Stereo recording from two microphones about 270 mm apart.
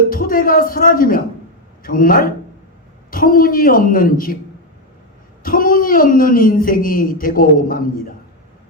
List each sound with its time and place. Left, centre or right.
0.1 s speech: left
5.4 s speech: left